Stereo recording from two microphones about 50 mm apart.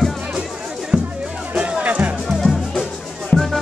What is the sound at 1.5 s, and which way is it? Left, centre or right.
Music, right.